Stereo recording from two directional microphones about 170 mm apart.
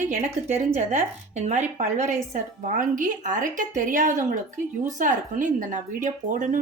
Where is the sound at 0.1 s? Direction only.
45° right (ahead or behind).